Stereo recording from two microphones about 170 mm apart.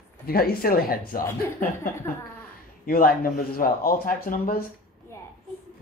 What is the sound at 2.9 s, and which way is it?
Speech, 60° left (ahead or behind).